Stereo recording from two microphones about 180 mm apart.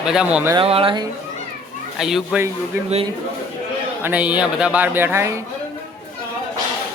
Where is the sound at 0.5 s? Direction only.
30° right (ahead or behind).